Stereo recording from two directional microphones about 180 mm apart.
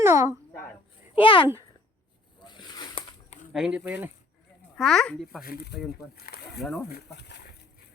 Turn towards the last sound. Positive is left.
turn(degrees=65)  # may be behind; listen again after turning